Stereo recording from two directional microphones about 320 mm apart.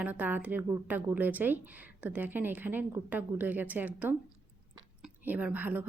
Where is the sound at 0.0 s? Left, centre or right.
Centre.